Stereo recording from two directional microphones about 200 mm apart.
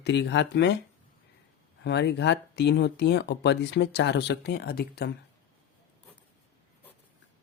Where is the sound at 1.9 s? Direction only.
60° left (ahead or behind).